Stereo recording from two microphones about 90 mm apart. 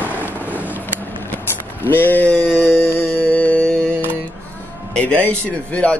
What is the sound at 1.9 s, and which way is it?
Speech, 20° left (ahead or behind).